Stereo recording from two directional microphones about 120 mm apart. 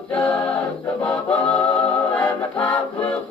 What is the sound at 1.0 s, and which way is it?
Music, 15° left (ahead or behind).